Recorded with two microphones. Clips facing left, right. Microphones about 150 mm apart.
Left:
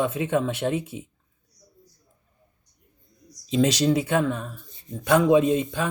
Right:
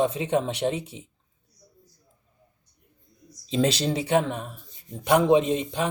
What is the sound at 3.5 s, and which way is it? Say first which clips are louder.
Speech: left 3 dB; 30° right (ahead or behind).